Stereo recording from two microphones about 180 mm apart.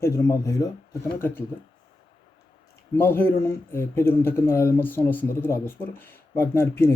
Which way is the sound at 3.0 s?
10° left (ahead or behind).